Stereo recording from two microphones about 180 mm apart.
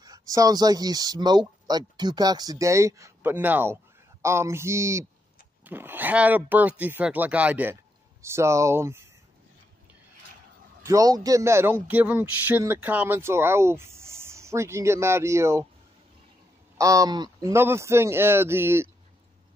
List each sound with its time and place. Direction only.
0.0 s speech: 20° right (ahead or behind)
10.8 s speech: 20° right (ahead or behind)
16.7 s speech: 20° right (ahead or behind)